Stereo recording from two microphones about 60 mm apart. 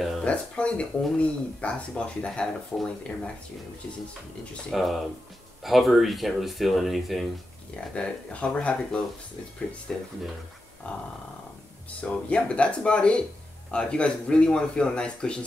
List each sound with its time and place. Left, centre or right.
0.2 s speech: centre
4.6 s speech: centre
7.9 s speech: centre